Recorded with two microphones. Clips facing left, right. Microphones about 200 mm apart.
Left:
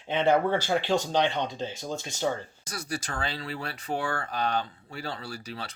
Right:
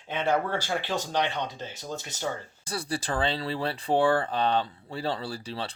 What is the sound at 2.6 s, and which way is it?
Speech, 30° right (ahead or behind).